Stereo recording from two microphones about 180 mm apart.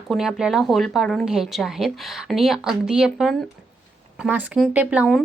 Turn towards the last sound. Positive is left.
turn(degrees=-5)  # may be behind; listen again after turning